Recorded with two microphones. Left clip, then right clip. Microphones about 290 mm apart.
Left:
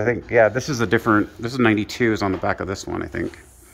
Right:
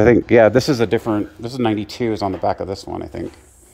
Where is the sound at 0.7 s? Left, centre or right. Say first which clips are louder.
Right 1 dB; centre.